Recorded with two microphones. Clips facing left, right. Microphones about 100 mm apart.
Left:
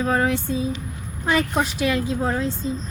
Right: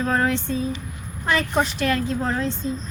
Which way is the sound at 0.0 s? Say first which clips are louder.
Left 1 dB; 10° left (ahead or behind).